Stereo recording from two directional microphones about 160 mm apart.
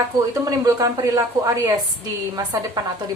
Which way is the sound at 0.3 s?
20° right (ahead or behind).